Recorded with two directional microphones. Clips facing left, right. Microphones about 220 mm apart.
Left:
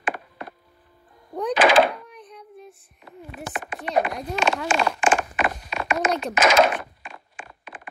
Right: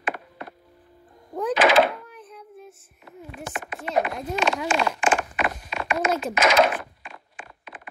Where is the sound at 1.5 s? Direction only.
35° left (ahead or behind).